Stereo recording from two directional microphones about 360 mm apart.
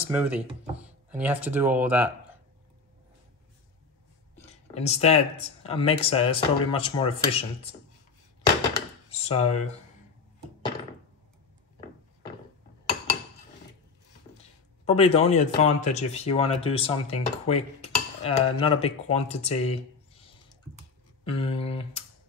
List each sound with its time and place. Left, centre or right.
0.0 s speech: centre
4.5 s speech: centre
8.6 s a sound: centre
14.9 s speech: centre